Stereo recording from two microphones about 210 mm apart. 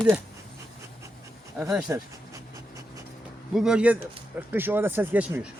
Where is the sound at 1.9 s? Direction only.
15° right (ahead or behind).